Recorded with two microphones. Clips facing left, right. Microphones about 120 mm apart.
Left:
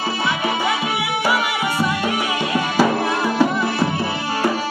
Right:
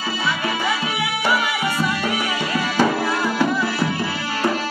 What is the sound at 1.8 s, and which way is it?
Music, 15° left (ahead or behind).